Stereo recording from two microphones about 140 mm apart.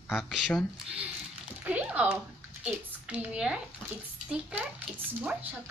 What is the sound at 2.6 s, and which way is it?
A woman's voice, 10° right (ahead or behind).